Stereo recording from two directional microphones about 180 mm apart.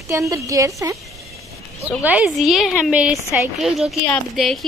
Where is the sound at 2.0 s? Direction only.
10° right (ahead or behind).